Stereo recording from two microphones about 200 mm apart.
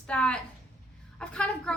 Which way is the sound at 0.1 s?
5° left (ahead or behind).